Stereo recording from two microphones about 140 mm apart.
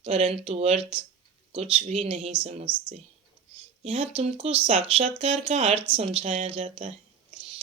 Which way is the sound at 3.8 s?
45° right (ahead or behind).